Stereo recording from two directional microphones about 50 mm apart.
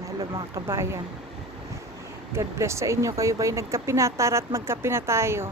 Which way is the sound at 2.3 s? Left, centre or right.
Right.